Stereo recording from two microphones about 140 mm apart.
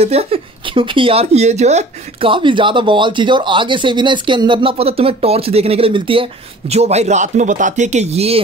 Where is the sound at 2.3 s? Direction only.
35° right (ahead or behind).